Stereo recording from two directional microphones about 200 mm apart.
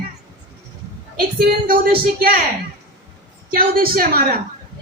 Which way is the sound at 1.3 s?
50° right (ahead or behind).